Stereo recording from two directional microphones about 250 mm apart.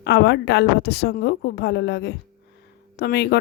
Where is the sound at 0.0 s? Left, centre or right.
Left.